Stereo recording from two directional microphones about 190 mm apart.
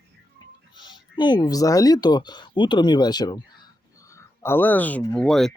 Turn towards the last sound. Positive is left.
turn(degrees=0)  # may be behind; listen again after turning